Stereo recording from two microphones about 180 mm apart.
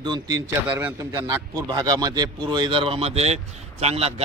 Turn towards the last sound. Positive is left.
turn(degrees=-35)  # may be behind; listen again after turning